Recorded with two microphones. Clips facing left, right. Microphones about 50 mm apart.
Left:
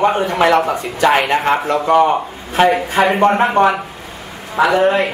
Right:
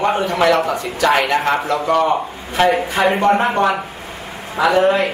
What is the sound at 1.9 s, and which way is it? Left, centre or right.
Speech, centre.